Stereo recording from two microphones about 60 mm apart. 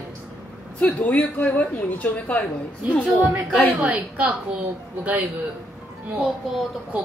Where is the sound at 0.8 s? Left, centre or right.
Left.